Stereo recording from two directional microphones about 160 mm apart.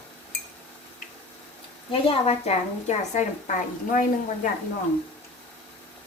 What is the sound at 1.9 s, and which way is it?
A woman's voice, 40° left (ahead or behind).